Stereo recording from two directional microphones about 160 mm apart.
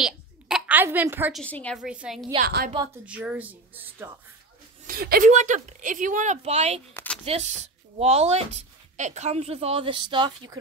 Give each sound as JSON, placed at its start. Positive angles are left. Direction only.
{"t": 0.0, "sound": "a sound", "side_deg": -5}
{"t": 1.3, "sound": "a woman's voice", "side_deg": 5}
{"t": 1.8, "sound": "a woman's voice", "side_deg": -5}
{"t": 2.4, "sound": "a woman's voice", "side_deg": -65}
{"t": 3.1, "sound": "speech", "side_deg": -10}
{"t": 4.8, "sound": "a woman's voice", "side_deg": -65}
{"t": 5.3, "sound": "speech", "side_deg": -45}
{"t": 6.9, "sound": "a sound", "side_deg": 10}
{"t": 7.2, "sound": "speech", "side_deg": -40}